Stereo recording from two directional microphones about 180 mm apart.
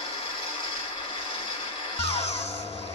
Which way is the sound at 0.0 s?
30° left (ahead or behind).